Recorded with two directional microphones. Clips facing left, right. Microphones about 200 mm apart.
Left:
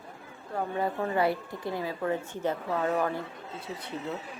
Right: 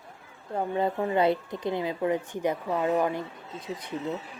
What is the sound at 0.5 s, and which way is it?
Speech, 20° right (ahead or behind).